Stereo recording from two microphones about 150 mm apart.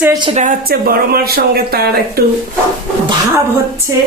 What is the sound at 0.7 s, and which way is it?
Speech, 90° right.